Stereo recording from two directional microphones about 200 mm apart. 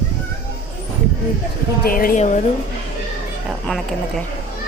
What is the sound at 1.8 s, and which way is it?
Speech, 45° left (ahead or behind).